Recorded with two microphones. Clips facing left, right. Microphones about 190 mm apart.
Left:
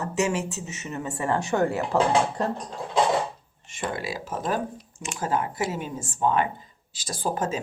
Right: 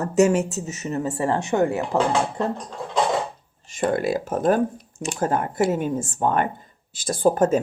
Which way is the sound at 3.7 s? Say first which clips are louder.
Right 9 dB; 50° right (ahead or behind).